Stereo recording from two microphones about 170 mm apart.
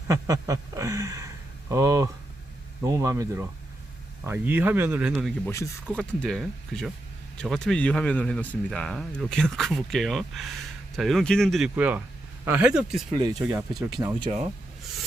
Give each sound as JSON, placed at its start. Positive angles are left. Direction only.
{"t": 0.1, "sound": "speech", "side_deg": -20}
{"t": 5.5, "sound": "speech", "side_deg": 15}
{"t": 6.0, "sound": "speech", "side_deg": 0}
{"t": 11.8, "sound": "speech", "side_deg": -10}
{"t": 13.1, "sound": "speech", "side_deg": -25}